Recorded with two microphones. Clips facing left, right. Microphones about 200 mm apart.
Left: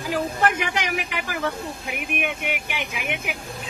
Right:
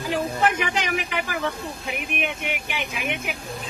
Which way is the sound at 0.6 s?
15° left (ahead or behind).